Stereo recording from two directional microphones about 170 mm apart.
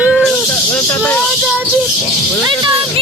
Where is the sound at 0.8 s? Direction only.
15° left (ahead or behind).